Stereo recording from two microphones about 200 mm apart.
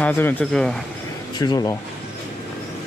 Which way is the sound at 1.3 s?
20° left (ahead or behind).